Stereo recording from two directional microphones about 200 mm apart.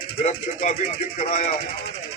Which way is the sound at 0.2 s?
35° left (ahead or behind).